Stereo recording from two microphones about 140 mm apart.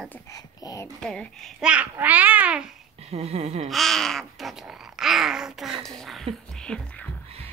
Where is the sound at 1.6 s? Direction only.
10° right (ahead or behind).